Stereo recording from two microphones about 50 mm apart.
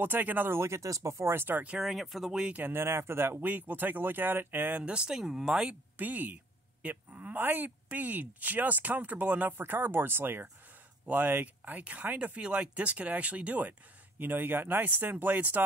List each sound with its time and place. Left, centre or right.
0.0 s speech: right
0.5 s speech: right
1.3 s speech: right
1.8 s speech: centre
2.7 s speech: right
4.8 s speech: centre
5.9 s speech: right
9.5 s speech: right
11.1 s speech: right